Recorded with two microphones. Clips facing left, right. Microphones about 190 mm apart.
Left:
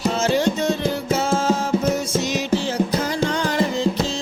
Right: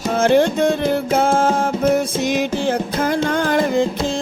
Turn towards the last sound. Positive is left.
turn(degrees=-55)  # may be behind; listen again after turning